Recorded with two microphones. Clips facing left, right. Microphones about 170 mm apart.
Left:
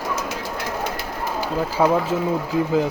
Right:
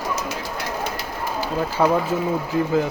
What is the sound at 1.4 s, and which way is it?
Speech, 10° left (ahead or behind).